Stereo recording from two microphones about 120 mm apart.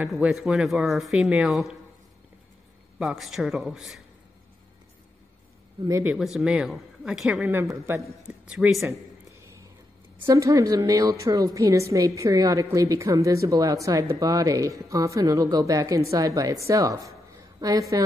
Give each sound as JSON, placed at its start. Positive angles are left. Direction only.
{"t": 0.0, "sound": "speech", "side_deg": -10}
{"t": 3.0, "sound": "speech", "side_deg": 0}
{"t": 6.1, "sound": "speech", "side_deg": -5}
{"t": 7.6, "sound": "a woman's voice", "side_deg": -25}
{"t": 8.3, "sound": "speech", "side_deg": -5}
{"t": 10.2, "sound": "a woman's voice", "side_deg": -25}